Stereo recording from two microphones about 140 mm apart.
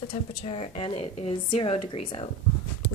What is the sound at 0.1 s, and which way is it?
A woman's voice, 45° left (ahead or behind).